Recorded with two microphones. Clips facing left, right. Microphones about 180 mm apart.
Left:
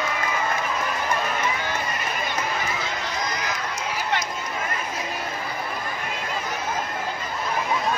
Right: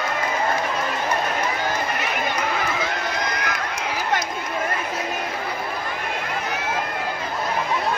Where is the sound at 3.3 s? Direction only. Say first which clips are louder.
Right 2 dB; 60° right (ahead or behind).